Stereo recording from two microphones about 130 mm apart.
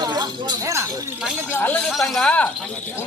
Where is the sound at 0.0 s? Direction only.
35° right (ahead or behind).